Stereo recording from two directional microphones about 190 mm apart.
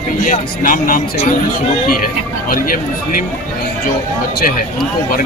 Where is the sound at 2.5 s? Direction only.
45° left (ahead or behind).